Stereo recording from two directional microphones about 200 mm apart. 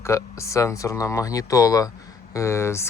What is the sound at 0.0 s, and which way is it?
Speech, 15° left (ahead or behind).